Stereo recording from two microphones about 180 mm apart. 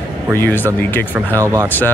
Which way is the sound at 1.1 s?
15° right (ahead or behind).